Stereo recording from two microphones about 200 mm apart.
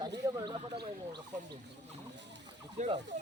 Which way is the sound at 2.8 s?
35° right (ahead or behind).